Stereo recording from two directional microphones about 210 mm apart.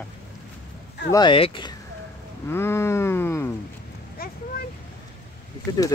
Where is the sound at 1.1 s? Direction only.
20° left (ahead or behind).